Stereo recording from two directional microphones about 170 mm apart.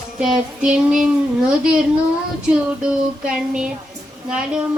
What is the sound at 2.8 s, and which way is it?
Child singing, 5° right (ahead or behind).